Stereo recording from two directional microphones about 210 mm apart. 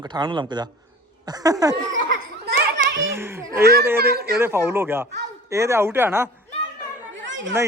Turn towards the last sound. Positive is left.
turn(degrees=-60)  # may be behind; listen again after turning